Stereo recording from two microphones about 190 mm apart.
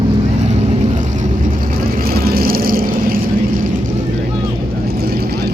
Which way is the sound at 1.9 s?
50° right (ahead or behind).